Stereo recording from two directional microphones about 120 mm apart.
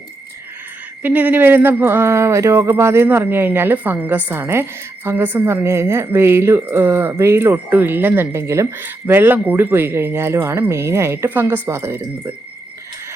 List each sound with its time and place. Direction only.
1.0 s speech: 15° right (ahead or behind)